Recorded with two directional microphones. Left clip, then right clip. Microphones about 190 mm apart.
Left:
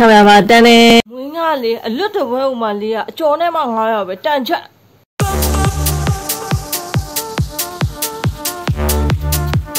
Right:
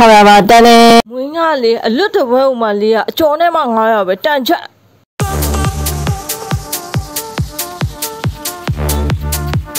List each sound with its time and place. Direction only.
0.0 s speech: 25° right (ahead or behind)
5.6 s music: centre (ahead or behind)